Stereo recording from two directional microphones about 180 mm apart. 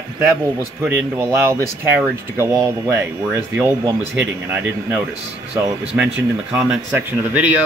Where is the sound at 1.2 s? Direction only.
15° right (ahead or behind).